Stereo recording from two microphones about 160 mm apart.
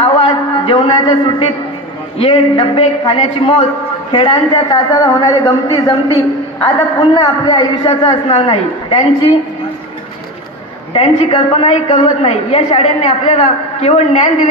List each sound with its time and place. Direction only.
0.0 s a sound: 30° left (ahead or behind)
2.1 s a woman's voice: 35° left (ahead or behind)
10.9 s a woman's voice: 35° left (ahead or behind)